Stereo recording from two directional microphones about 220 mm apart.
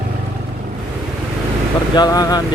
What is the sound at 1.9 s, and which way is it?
Speech, 15° left (ahead or behind).